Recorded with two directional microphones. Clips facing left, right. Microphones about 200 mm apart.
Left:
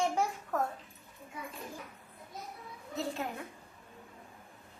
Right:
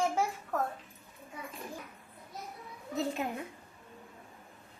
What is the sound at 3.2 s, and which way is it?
Speech, 15° right (ahead or behind).